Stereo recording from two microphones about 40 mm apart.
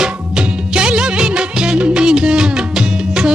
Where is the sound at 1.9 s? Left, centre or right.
Right.